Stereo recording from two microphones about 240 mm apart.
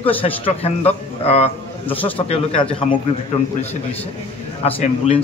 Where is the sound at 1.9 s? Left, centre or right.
Centre.